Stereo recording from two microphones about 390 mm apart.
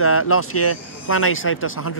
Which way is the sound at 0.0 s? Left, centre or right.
Left.